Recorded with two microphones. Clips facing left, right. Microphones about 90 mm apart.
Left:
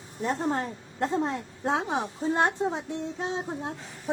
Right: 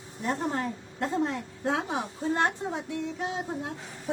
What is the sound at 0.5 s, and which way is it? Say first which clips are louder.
A woman's voice: left 1 dB; 30° left (ahead or behind).